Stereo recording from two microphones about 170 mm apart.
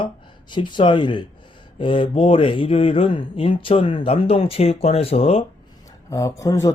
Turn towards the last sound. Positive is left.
turn(degrees=20)  # may be behind; listen again after turning